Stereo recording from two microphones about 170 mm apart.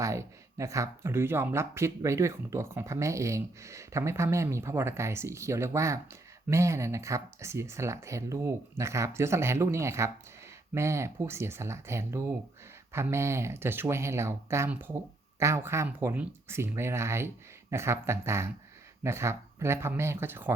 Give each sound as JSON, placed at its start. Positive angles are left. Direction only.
{"t": 0.0, "sound": "speech", "side_deg": -20}